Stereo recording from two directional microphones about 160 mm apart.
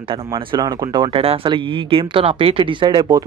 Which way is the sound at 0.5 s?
30° right (ahead or behind).